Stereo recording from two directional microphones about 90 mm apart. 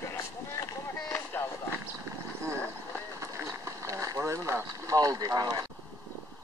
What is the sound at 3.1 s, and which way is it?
Boat, 35° right (ahead or behind).